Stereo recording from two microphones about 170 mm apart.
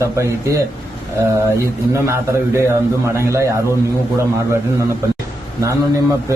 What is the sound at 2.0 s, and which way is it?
A man's voice, 15° right (ahead or behind).